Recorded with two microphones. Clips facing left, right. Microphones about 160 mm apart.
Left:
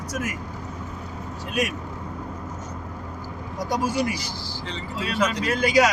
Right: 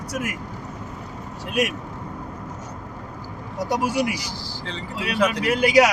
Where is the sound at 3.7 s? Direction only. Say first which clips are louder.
Right 1 dB; 70° right (ahead or behind).